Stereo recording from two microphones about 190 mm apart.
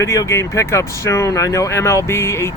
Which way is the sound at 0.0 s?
15° left (ahead or behind).